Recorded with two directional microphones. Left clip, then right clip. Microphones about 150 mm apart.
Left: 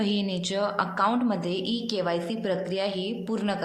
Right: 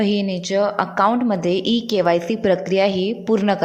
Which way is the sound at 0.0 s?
40° right (ahead or behind).